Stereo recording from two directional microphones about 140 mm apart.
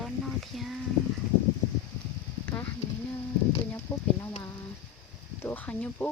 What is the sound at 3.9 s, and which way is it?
Speech, 15° left (ahead or behind).